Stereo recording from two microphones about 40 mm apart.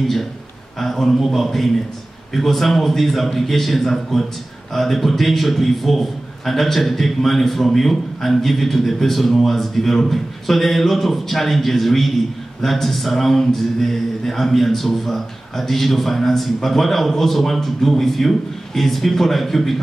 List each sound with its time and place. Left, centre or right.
0.0 s a man's voice: centre